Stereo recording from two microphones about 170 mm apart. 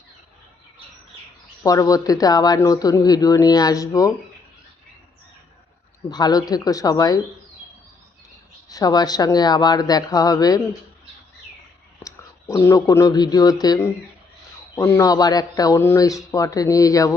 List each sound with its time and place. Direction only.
1.6 s speech: 20° left (ahead or behind)
6.1 s speech: 25° left (ahead or behind)
8.7 s speech: 20° left (ahead or behind)
12.0 s speech: 15° left (ahead or behind)